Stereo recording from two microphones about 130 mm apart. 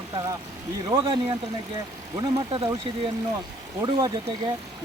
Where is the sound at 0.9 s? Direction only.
40° right (ahead or behind).